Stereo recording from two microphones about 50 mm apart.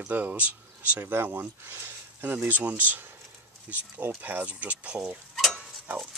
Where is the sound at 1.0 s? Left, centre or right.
Right.